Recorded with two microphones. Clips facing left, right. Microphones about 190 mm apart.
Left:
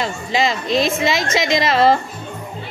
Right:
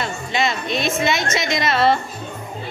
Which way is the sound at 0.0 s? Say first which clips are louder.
Left 3 dB; 90° left.